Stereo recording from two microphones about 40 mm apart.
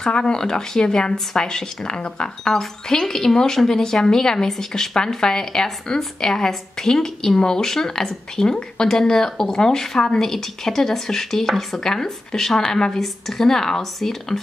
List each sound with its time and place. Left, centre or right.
0.0 s a woman's voice: centre